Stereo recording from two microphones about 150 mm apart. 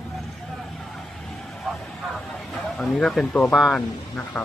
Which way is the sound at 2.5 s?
Centre (ahead or behind).